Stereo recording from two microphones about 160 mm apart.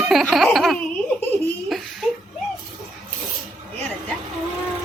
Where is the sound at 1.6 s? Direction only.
Centre (ahead or behind).